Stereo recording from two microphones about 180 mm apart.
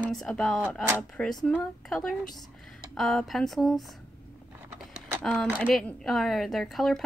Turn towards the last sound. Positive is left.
turn(degrees=0)  # may be behind; listen again after turning